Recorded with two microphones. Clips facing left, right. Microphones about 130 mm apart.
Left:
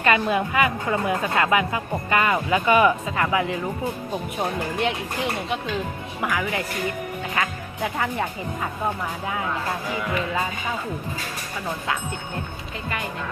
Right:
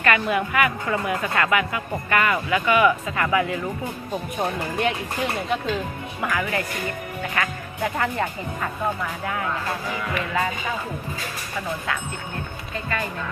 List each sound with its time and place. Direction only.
0.0 s a woman's voice: 25° left (ahead or behind)
3.2 s a woman's voice: 20° left (ahead or behind)
6.2 s speech: 10° left (ahead or behind)